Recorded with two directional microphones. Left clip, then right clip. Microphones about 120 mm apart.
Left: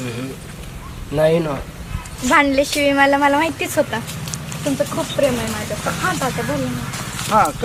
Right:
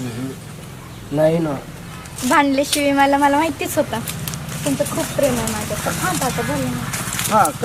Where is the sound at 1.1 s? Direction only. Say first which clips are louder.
Left 1 dB; 15° left (ahead or behind).